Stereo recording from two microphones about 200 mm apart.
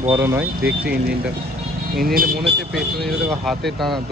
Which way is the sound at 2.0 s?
45° right (ahead or behind).